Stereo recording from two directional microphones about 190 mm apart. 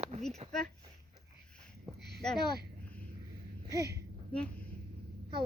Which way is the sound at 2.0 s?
60° right (ahead or behind).